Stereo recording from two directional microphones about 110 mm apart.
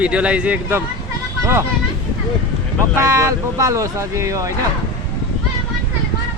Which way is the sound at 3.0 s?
30° right (ahead or behind).